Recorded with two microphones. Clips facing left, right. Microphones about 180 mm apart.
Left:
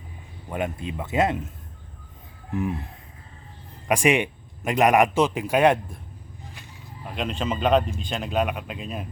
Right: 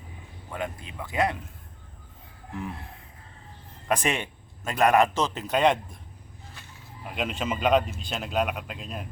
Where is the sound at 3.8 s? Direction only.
15° left (ahead or behind).